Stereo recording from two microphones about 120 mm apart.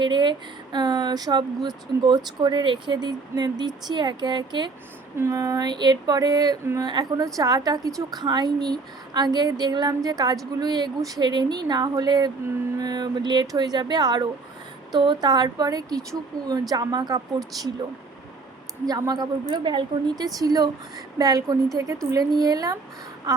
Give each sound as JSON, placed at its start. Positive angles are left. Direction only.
{"t": 0.0, "sound": "speech", "side_deg": -40}
{"t": 5.1, "sound": "speech", "side_deg": -25}
{"t": 18.9, "sound": "speech", "side_deg": -35}